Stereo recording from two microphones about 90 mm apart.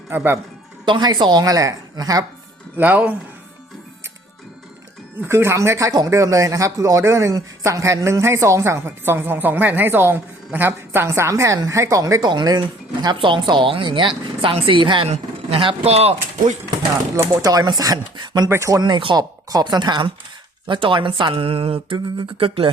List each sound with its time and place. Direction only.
0.1 s speech: 20° right (ahead or behind)
0.9 s a woman's voice: 55° right (ahead or behind)
2.7 s speech: 20° right (ahead or behind)
5.2 s speech: 30° right (ahead or behind)
12.2 s a woman's voice: 50° right (ahead or behind)
13.1 s speech: 65° right (ahead or behind)
15.4 s speech: 90° right
17.4 s a woman's voice: 45° right (ahead or behind)
18.4 s speech: 30° right (ahead or behind)
18.7 s a woman's voice: 55° right (ahead or behind)
19.5 s a woman's voice: 45° right (ahead or behind)
20.7 s speech: 70° right (ahead or behind); by 22.7 s 90° right